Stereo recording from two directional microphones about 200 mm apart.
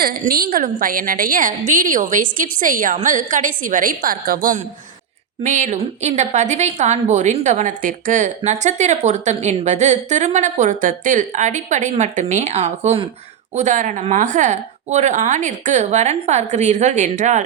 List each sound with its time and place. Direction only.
0.0 s a woman's voice: 50° right (ahead or behind)